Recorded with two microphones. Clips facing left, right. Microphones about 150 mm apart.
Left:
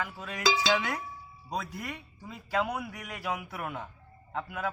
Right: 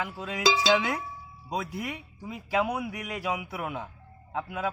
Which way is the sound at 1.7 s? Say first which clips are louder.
Right 4 dB; 10° right (ahead or behind).